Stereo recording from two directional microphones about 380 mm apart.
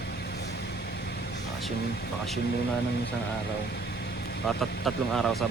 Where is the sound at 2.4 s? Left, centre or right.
Left.